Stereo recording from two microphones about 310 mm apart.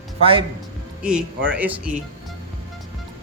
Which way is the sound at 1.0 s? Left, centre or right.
Centre.